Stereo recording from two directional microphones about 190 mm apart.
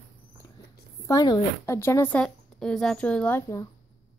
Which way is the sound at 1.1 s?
20° left (ahead or behind).